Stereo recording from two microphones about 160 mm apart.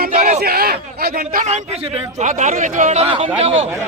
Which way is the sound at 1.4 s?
40° right (ahead or behind).